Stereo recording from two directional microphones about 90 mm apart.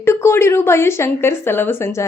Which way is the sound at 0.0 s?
30° left (ahead or behind).